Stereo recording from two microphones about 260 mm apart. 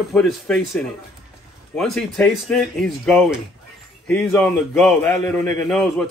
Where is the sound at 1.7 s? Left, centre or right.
Centre.